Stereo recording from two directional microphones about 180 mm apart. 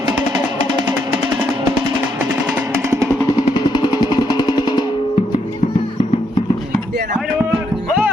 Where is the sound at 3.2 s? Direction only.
20° left (ahead or behind).